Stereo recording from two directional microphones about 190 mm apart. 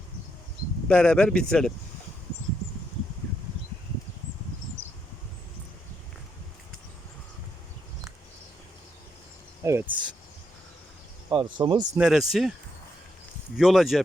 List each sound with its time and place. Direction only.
0.9 s speech: 5° left (ahead or behind)
9.6 s speech: 15° right (ahead or behind)
11.3 s speech: 25° right (ahead or behind)
11.9 s speech: centre (ahead or behind)
13.6 s speech: centre (ahead or behind)